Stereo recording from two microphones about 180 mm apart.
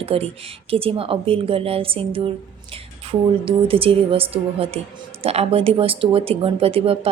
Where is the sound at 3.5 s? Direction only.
30° right (ahead or behind).